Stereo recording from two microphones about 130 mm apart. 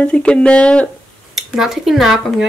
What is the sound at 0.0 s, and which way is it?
Speech, 10° left (ahead or behind).